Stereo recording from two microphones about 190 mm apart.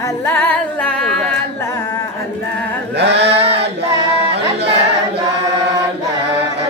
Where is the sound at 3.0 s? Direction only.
65° right (ahead or behind).